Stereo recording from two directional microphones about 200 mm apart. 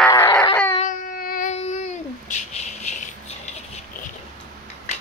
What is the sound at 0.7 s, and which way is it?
Child singing, 40° left (ahead or behind).